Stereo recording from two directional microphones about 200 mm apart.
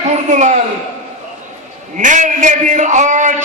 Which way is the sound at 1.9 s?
40° right (ahead or behind).